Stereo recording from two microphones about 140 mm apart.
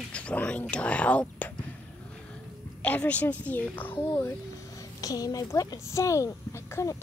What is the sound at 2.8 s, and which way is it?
Speech, 10° left (ahead or behind).